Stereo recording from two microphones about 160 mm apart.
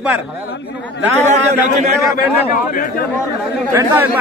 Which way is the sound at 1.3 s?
45° right (ahead or behind).